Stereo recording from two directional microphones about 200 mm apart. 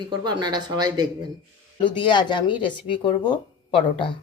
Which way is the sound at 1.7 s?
25° left (ahead or behind).